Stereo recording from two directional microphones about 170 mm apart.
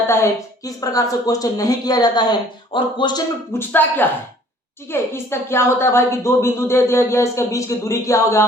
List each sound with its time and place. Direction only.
0.1 s a woman's voice: 15° left (ahead or behind)
3.5 s a woman's voice: 10° left (ahead or behind)